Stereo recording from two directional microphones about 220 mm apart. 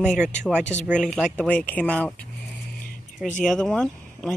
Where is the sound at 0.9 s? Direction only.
5° left (ahead or behind).